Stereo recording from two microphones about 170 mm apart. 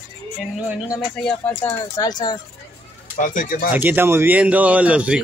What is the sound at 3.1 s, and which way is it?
Speech, 50° left (ahead or behind).